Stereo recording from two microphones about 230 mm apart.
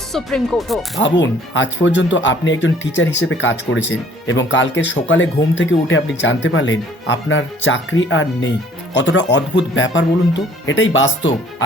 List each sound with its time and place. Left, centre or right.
0.1 s speech: centre
0.9 s speech: left